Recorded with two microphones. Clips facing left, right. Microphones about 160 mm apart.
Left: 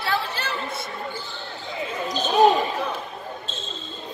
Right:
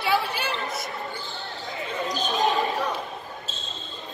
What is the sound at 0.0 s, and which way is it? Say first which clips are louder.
Basketball bounce: right 2 dB; 10° right (ahead or behind).